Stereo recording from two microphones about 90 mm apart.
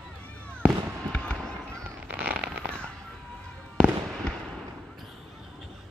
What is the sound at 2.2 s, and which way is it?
Fireworks, 15° right (ahead or behind).